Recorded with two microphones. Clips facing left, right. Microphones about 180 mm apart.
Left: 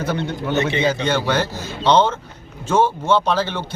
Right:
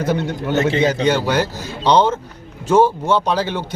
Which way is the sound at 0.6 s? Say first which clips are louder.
Right 6 dB; 45° right (ahead or behind).